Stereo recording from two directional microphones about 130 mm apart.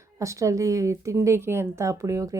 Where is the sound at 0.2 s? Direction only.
25° right (ahead or behind).